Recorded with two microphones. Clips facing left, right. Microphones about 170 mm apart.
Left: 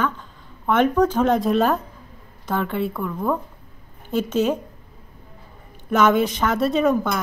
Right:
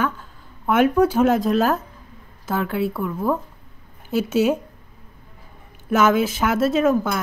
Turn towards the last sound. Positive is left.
turn(degrees=-5)  # may be behind; listen again after turning